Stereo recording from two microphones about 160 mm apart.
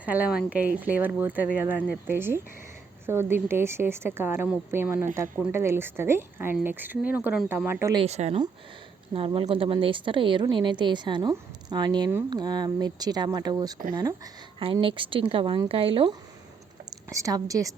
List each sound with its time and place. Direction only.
0.0 s speech: 10° right (ahead or behind)
8.0 s a woman's voice: 40° right (ahead or behind); by 14.2 s 20° right (ahead or behind)
14.6 s speech: 35° right (ahead or behind)
16.9 s a woman's voice: 20° right (ahead or behind)